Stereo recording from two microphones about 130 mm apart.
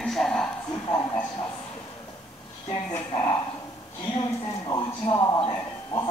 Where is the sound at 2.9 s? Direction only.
25° left (ahead or behind).